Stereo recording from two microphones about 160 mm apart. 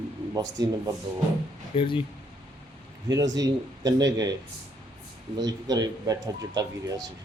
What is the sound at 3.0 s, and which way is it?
Speech, 25° right (ahead or behind).